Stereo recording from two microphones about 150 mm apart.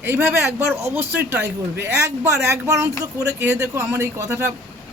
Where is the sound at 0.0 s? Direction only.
15° right (ahead or behind).